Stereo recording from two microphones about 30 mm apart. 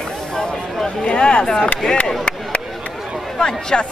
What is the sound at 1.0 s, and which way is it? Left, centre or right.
Speech, left.